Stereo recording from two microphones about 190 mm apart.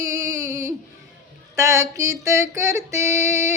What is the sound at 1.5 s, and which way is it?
Music, 15° right (ahead or behind).